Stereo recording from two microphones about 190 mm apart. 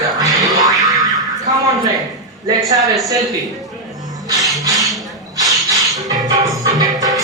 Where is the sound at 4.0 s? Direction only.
20° right (ahead or behind).